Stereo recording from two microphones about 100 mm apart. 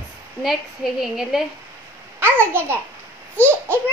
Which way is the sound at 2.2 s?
20° right (ahead or behind).